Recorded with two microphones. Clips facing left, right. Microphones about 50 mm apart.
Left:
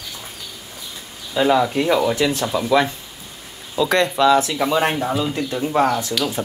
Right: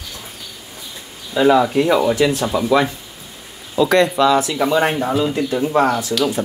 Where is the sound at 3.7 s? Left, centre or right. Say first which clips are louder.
Right 4 dB; right.